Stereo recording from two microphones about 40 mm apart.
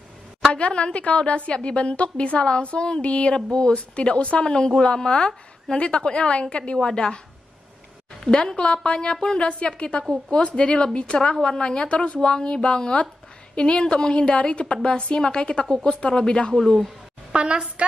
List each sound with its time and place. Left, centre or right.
0.6 s a woman's voice: left
8.2 s a woman's voice: centre
15.6 s speech: centre
15.9 s a woman's voice: left
16.5 s speech: centre
17.3 s a sound: right